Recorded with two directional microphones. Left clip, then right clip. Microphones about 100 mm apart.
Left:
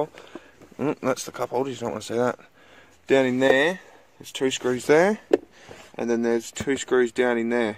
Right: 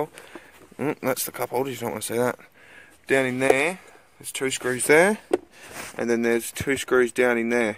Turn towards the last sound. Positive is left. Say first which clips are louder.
# right 1 dB
turn(degrees=-5)  # may be behind; listen again after turning